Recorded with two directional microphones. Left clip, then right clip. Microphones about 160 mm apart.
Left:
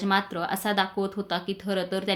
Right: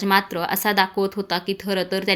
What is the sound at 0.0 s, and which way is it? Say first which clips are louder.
A woman's voice: right 6 dB; 25° right (ahead or behind).